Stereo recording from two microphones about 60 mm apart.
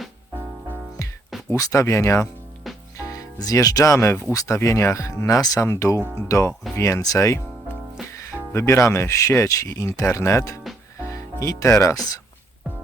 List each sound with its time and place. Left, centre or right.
1.5 s speech: left
1.8 s speech: left
3.1 s speech: left
5.5 s speech: left
6.3 s speech: left
6.7 s speech: left
7.0 s speech: left